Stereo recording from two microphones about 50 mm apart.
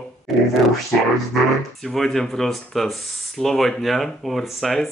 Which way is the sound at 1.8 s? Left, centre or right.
Centre.